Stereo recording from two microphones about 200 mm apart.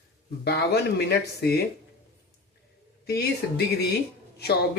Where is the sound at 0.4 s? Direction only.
55° left (ahead or behind).